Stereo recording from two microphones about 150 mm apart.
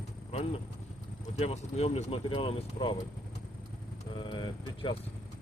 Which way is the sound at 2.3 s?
35° left (ahead or behind).